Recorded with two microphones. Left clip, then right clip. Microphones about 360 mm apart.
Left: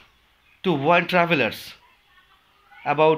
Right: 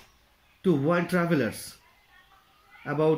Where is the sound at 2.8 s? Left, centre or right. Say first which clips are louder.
Left 7 dB; left.